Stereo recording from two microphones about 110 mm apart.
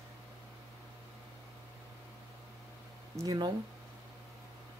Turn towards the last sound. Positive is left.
turn(degrees=-40)  # may be behind; listen again after turning